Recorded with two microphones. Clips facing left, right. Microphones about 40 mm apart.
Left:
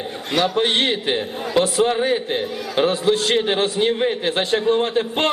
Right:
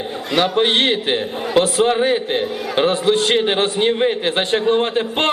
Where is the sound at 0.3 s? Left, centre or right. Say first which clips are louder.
Right 3 dB; right.